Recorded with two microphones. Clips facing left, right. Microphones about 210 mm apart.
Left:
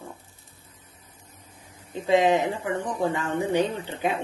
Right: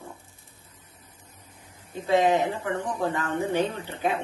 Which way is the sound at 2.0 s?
15° left (ahead or behind).